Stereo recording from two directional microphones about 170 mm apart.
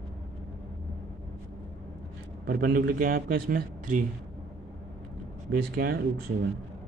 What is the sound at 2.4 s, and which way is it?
Speech, 60° right (ahead or behind).